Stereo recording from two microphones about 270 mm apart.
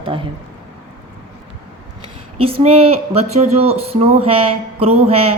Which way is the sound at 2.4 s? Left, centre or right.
Right.